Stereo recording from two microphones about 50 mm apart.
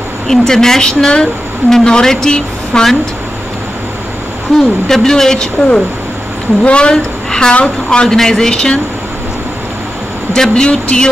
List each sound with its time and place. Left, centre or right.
0.3 s a woman's voice: centre
4.6 s a woman's voice: centre
10.3 s a woman's voice: centre